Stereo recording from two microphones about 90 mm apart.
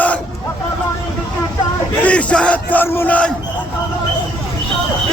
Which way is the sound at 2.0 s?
15° left (ahead or behind).